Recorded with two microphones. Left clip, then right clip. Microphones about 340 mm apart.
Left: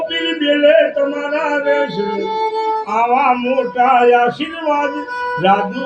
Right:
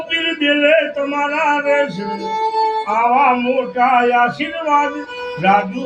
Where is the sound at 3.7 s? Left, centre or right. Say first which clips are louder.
Left 3 dB; right.